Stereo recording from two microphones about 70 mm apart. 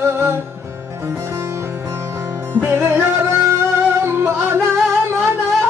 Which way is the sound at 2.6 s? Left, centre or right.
Right.